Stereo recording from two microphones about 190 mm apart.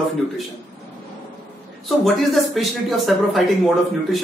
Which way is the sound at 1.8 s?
Centre (ahead or behind).